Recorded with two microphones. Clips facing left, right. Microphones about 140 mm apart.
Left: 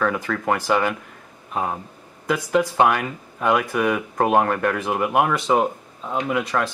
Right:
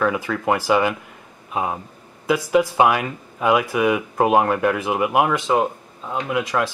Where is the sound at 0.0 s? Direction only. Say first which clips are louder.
Right 2 dB; 5° right (ahead or behind).